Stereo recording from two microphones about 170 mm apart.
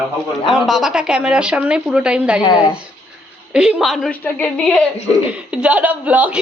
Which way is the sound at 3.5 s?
5° right (ahead or behind).